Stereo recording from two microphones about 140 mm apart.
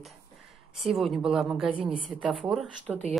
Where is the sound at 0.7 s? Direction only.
Centre (ahead or behind).